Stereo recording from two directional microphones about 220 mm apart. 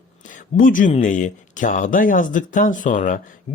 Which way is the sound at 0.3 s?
35° left (ahead or behind).